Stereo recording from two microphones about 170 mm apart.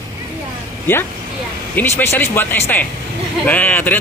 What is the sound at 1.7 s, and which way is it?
A man's voice, 10° left (ahead or behind).